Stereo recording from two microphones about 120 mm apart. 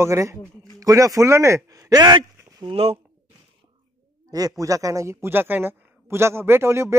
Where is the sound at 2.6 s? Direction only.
55° right (ahead or behind).